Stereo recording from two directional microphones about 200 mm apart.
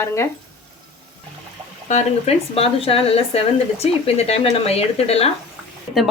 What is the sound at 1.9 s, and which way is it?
Speech, 35° left (ahead or behind).